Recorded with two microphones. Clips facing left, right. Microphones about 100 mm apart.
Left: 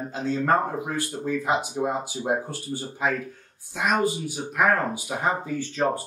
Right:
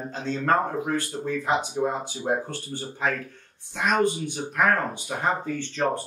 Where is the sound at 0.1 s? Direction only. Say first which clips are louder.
Left 1 dB; 10° left (ahead or behind).